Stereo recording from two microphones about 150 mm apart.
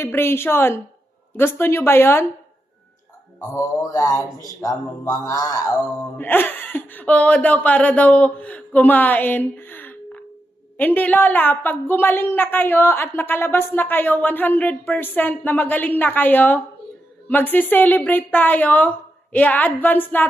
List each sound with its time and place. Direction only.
0.0 s a woman's voice: 15° left (ahead or behind)
3.3 s speech: 25° left (ahead or behind)
6.1 s a woman's voice: 10° left (ahead or behind)